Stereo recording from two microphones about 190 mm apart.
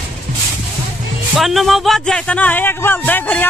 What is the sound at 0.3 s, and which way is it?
Speech, 40° right (ahead or behind).